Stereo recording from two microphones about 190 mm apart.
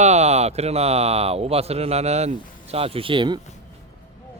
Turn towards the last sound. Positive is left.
turn(degrees=-25)  # may be behind; listen again after turning